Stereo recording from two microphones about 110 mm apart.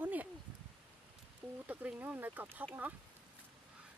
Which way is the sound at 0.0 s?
15° right (ahead or behind).